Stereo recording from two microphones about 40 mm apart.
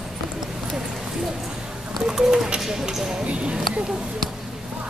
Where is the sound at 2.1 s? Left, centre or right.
Centre.